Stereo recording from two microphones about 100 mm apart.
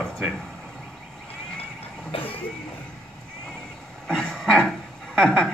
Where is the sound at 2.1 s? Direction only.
65° left (ahead or behind).